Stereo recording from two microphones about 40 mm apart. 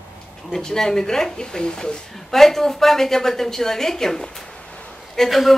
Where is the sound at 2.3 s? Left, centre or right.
Centre.